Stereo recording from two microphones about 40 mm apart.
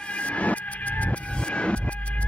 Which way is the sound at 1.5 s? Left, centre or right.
Left.